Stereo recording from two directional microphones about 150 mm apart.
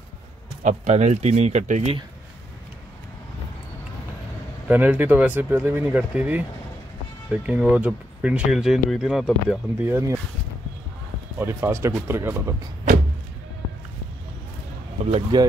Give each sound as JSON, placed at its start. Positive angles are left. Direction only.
{"t": 0.7, "sound": "speech", "side_deg": -50}
{"t": 4.6, "sound": "speech", "side_deg": -10}
{"t": 9.8, "sound": "speech", "side_deg": -15}
{"t": 11.3, "sound": "speech", "side_deg": -15}
{"t": 15.3, "sound": "speech", "side_deg": -30}